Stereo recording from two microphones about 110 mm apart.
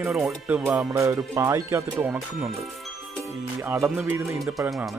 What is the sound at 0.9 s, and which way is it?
Speech, 25° right (ahead or behind).